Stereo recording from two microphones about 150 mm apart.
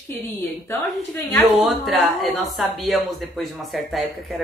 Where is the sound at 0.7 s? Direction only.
15° left (ahead or behind).